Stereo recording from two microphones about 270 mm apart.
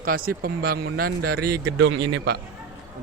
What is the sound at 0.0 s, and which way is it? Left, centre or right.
Speech, right.